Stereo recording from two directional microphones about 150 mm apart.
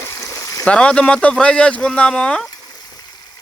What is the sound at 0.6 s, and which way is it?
Speech, 5° left (ahead or behind).